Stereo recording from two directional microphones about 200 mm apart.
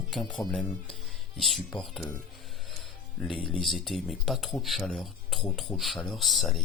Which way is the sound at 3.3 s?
25° left (ahead or behind).